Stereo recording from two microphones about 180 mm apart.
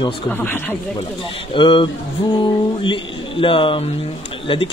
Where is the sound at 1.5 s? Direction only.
30° left (ahead or behind).